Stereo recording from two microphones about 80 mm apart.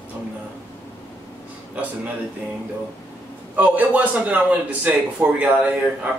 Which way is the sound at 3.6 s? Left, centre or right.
Right.